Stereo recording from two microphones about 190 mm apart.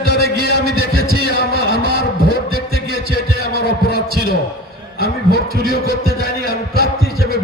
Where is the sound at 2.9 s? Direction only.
55° left (ahead or behind).